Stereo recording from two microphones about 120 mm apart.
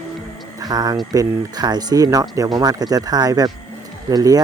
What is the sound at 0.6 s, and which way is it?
Speech, 35° right (ahead or behind).